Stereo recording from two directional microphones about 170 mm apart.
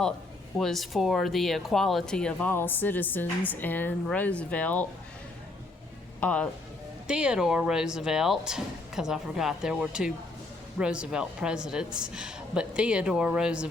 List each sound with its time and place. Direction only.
0.6 s speech: centre (ahead or behind)
6.1 s speech: 10° left (ahead or behind)
7.1 s speech: 5° right (ahead or behind)